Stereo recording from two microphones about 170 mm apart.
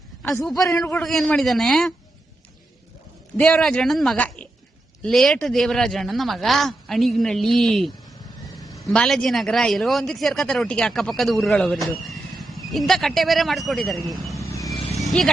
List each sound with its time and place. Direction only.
0.2 s a sound: 10° left (ahead or behind)
0.5 s a man's voice: 20° left (ahead or behind)
1.0 s a man's voice: centre (ahead or behind)
3.3 s a man's voice: 5° left (ahead or behind)
8.6 s a sound: 20° left (ahead or behind)
8.9 s a man's voice: 5° left (ahead or behind)
15.0 s vehicle: centre (ahead or behind)